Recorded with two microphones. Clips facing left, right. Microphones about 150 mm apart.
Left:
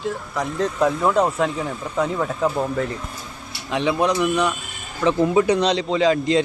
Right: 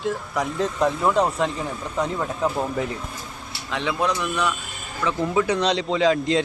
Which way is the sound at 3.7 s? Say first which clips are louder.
Left 4 dB; 15° left (ahead or behind).